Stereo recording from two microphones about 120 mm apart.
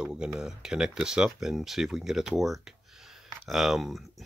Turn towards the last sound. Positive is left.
turn(degrees=0)  # may be behind; listen again after turning